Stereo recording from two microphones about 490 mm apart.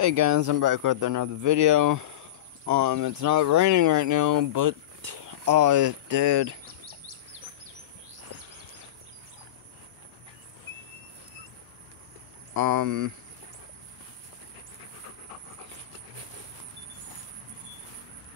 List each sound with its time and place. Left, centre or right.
0.0 s speech: right
6.6 s bird: right
8.3 s a sound: right
12.5 s speech: right